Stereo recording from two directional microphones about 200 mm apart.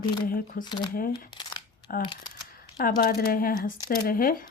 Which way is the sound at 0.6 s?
20° left (ahead or behind).